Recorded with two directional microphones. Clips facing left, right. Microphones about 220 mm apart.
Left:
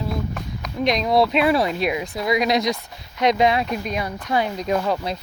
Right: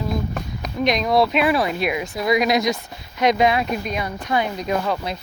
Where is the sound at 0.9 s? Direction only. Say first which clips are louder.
Even; 30° left (ahead or behind).